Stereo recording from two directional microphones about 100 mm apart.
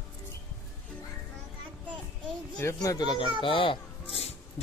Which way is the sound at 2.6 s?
35° left (ahead or behind).